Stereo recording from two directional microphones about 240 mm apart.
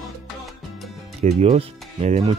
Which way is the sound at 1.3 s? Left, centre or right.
Right.